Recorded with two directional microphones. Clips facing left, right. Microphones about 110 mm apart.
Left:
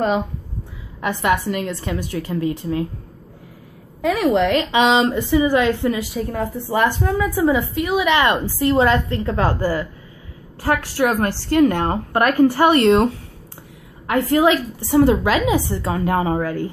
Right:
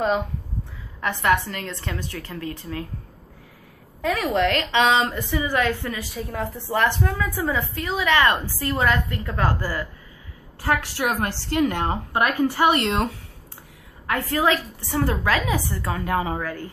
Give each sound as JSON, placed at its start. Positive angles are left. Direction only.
{"t": 1.0, "sound": "a woman's voice", "side_deg": 15}
{"t": 4.0, "sound": "a woman's voice", "side_deg": 10}
{"t": 6.1, "sound": "a woman's voice", "side_deg": 0}
{"t": 11.0, "sound": "a woman's voice", "side_deg": 45}
{"t": 14.0, "sound": "a woman's voice", "side_deg": 20}
{"t": 16.1, "sound": "speech", "side_deg": 35}